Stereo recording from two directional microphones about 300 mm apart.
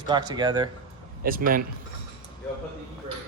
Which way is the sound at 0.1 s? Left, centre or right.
Centre.